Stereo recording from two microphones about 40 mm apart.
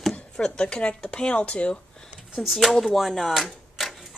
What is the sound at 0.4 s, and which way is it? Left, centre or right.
Speech, left.